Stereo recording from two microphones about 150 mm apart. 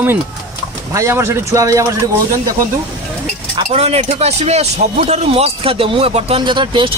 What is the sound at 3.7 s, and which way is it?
Speech, 45° right (ahead or behind).